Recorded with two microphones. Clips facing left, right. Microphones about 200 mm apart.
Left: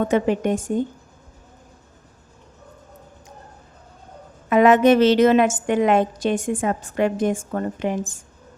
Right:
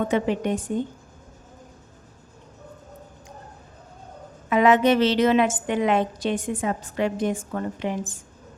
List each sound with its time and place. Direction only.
0.1 s a woman's voice: 45° left (ahead or behind)
4.4 s a woman's voice: 50° left (ahead or behind)